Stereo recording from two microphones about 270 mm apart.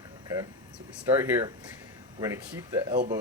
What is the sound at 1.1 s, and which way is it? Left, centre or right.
Speech, centre.